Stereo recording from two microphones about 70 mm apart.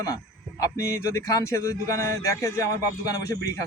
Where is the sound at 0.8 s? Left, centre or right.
Left.